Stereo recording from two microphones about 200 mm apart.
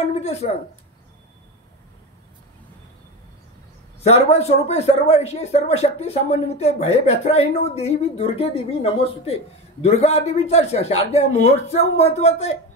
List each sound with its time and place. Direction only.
0.1 s speech: 30° left (ahead or behind)
4.0 s a man's voice: 30° left (ahead or behind)